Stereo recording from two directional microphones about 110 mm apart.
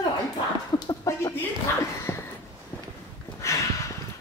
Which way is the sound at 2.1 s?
20° left (ahead or behind).